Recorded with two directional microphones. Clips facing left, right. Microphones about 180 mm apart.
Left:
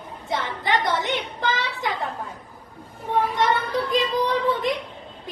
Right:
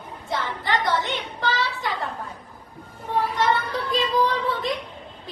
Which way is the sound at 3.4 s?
20° left (ahead or behind).